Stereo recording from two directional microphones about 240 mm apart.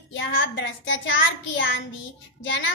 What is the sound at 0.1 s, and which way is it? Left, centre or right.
A woman's voice, left.